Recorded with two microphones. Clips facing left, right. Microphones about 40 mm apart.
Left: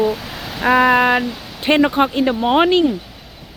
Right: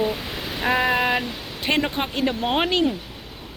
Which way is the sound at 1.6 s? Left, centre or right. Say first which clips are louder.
Left 9 dB; left.